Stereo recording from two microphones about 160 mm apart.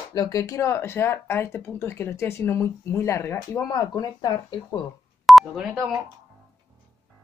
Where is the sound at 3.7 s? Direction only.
25° left (ahead or behind).